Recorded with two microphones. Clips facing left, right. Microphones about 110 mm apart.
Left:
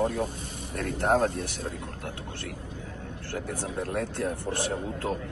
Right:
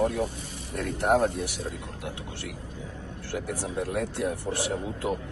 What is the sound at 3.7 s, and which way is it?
Speech, 15° right (ahead or behind).